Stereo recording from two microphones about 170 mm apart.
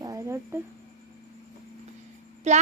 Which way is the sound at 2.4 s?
40° right (ahead or behind).